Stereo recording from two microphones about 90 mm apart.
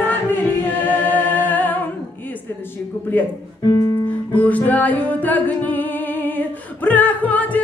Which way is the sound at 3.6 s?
45° left (ahead or behind).